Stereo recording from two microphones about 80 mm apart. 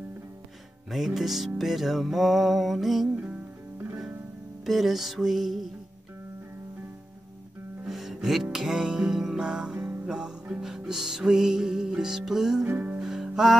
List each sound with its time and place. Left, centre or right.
0.8 s music: centre
4.6 s music: centre
7.8 s music: centre
12.6 s music: right
13.0 s music: centre